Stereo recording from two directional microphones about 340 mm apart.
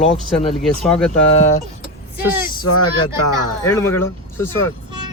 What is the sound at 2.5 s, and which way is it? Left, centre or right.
Speech, centre.